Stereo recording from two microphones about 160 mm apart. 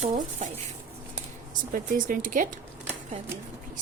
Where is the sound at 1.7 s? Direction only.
60° right (ahead or behind).